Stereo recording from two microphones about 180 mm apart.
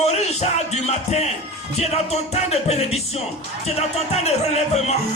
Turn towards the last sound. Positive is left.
turn(degrees=35)  # may be behind; listen again after turning